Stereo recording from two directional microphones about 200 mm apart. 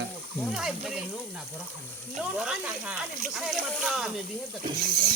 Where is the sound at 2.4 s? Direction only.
5° right (ahead or behind).